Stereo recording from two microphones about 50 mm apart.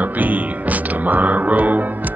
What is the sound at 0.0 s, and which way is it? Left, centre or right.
Music, right.